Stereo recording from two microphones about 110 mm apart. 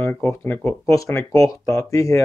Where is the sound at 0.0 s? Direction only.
20° left (ahead or behind).